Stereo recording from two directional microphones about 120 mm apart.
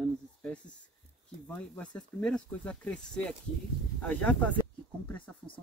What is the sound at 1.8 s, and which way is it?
Speech, 10° left (ahead or behind).